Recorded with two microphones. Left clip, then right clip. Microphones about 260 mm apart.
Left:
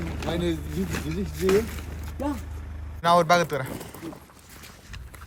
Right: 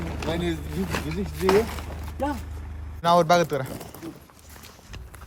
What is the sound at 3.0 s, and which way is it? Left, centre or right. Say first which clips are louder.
Speech: right 1 dB; centre.